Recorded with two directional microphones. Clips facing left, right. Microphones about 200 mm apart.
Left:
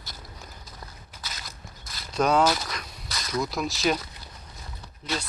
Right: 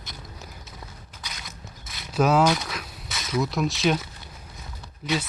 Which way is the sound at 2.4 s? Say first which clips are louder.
Right 2 dB; centre (ahead or behind).